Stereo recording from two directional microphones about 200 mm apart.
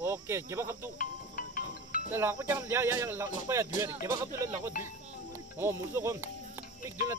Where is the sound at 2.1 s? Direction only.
10° right (ahead or behind).